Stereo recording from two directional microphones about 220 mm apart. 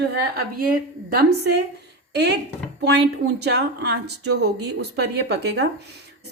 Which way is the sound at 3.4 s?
50° right (ahead or behind).